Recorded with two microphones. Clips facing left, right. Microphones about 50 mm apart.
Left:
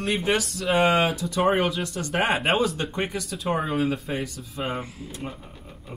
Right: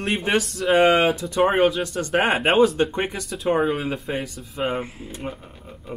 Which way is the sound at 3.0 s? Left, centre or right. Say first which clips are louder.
Right 2 dB; right.